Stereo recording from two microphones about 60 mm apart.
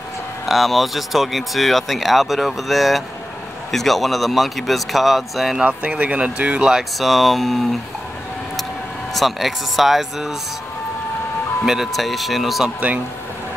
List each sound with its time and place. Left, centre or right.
0.5 s speech: centre
5.7 s speech: right
6.7 s speech: centre
9.1 s speech: centre
11.6 s speech: centre